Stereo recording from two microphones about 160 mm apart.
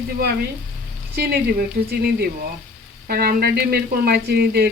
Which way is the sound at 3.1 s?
70° right (ahead or behind).